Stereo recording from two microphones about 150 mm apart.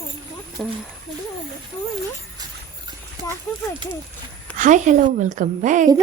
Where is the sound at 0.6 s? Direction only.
5° left (ahead or behind).